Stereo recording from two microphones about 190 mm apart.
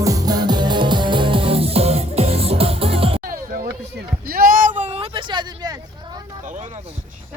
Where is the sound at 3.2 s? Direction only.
50° right (ahead or behind).